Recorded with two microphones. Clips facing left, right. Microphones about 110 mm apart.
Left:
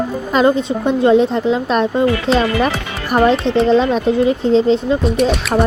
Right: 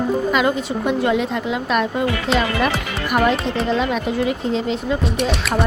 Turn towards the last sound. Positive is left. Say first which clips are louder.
# left 6 dB
turn(degrees=0)  # may be behind; listen again after turning